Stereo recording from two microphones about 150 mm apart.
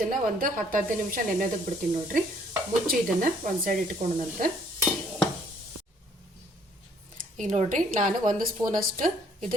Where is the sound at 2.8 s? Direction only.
70° right (ahead or behind).